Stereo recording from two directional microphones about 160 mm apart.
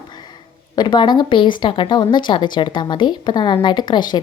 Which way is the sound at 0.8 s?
30° left (ahead or behind).